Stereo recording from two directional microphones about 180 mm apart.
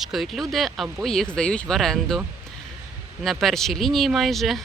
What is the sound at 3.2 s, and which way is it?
Speech, centre (ahead or behind).